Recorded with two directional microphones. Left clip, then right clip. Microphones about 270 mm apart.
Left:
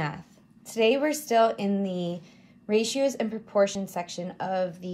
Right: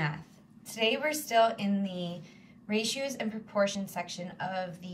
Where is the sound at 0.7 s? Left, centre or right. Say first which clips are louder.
Left 6 dB; left.